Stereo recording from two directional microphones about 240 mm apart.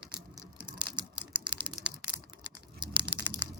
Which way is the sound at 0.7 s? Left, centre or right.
Centre.